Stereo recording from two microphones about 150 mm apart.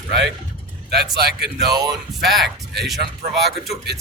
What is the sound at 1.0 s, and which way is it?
Speech, 90° right.